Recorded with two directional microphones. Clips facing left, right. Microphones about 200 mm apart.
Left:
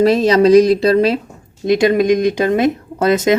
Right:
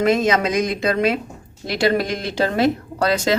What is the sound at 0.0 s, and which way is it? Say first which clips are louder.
Speech: left 6 dB; 35° left (ahead or behind).